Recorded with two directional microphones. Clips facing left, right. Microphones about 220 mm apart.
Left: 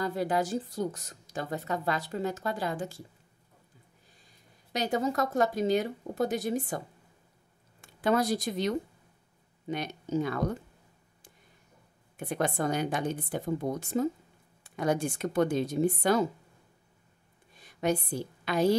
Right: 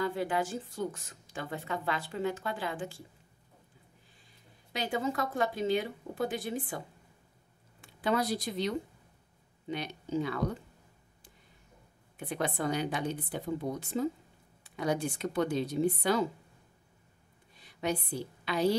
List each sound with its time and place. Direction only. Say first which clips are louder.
0.0 s a woman's voice: left 2 dB; 40° left (ahead or behind)
4.7 s a woman's voice: left 4 dB; 40° left (ahead or behind)
7.8 s a woman's voice: left 4 dB; 45° left (ahead or behind)
12.2 s a woman's voice: left 3 dB; 45° left (ahead or behind)
17.6 s a woman's voice: left 4 dB; 50° left (ahead or behind)